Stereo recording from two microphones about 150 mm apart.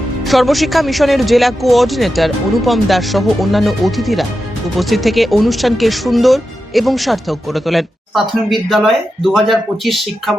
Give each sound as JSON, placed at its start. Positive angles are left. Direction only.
{"t": 0.3, "sound": "speech", "side_deg": 0}